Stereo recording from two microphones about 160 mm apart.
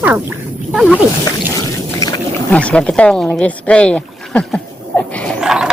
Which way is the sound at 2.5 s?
5° left (ahead or behind).